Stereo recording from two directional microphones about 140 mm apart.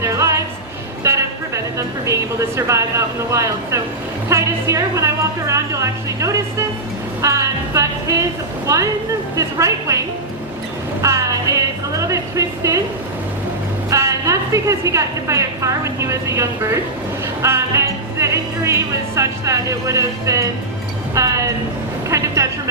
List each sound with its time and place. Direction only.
0.0 s music: 20° right (ahead or behind)
1.0 s a sound: 20° right (ahead or behind)
2.6 s a woman's voice: 20° right (ahead or behind)
11.0 s a woman's voice: 20° right (ahead or behind)
13.9 s a woman's voice: 20° right (ahead or behind)